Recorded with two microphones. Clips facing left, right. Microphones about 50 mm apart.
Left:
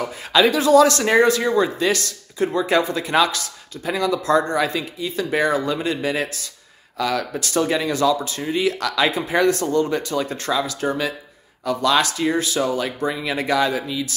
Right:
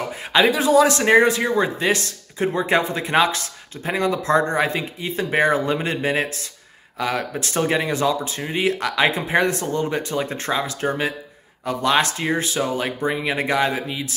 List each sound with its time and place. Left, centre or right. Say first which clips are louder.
0.3 s speech: left 2 dB; right